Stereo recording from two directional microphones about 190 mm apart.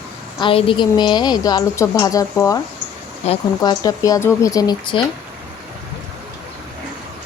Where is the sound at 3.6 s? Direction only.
20° left (ahead or behind).